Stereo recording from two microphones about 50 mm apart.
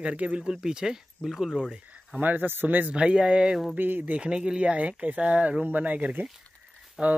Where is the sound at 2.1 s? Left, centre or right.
Right.